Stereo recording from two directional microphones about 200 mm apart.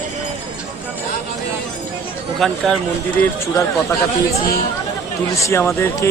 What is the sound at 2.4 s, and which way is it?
Speech, centre (ahead or behind).